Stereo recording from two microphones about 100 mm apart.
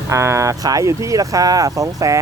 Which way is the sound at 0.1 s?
30° right (ahead or behind).